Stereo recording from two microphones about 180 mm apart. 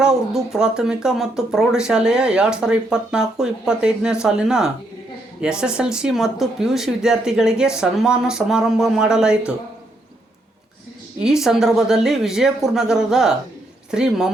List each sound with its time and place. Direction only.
0.0 s speech: 5° right (ahead or behind)
11.2 s speech: 5° right (ahead or behind)